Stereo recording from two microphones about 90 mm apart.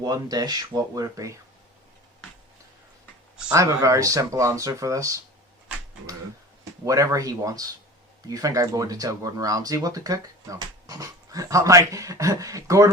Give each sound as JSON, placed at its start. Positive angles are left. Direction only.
{"t": 0.0, "sound": "speech", "side_deg": -45}
{"t": 3.5, "sound": "speech", "side_deg": -35}
{"t": 6.8, "sound": "speech", "side_deg": -35}